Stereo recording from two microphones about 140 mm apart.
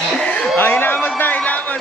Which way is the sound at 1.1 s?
10° left (ahead or behind).